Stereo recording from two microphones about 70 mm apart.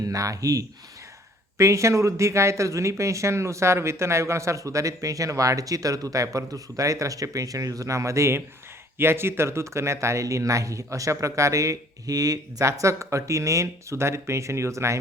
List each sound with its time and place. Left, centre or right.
0.0 s speech: right
1.5 s speech: right